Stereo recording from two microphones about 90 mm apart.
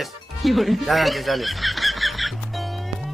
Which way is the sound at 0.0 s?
Centre (ahead or behind).